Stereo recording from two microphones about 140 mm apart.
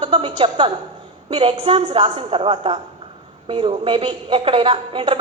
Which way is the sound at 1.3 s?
40° right (ahead or behind).